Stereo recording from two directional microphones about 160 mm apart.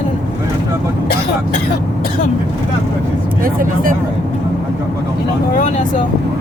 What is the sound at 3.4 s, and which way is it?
Speech, 60° right (ahead or behind).